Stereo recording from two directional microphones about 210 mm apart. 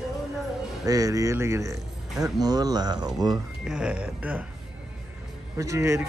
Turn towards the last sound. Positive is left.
turn(degrees=-15)  # may be behind; listen again after turning